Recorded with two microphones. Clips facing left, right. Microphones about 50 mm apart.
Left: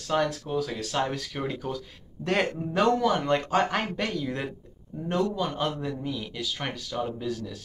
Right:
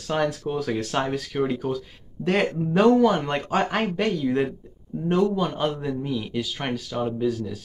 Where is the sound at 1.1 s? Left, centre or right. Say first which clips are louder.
Right 7 dB; centre.